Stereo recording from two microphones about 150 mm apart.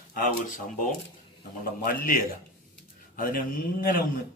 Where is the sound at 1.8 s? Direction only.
70° left (ahead or behind).